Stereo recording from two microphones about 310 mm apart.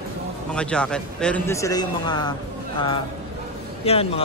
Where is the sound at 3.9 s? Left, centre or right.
Centre.